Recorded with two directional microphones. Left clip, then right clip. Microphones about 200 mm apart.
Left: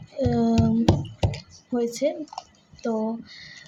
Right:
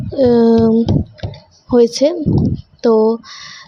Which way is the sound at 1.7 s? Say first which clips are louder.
Right 13 dB; 40° right (ahead or behind).